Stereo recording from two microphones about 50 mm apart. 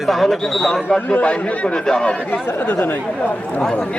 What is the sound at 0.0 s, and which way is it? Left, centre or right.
Speech, centre.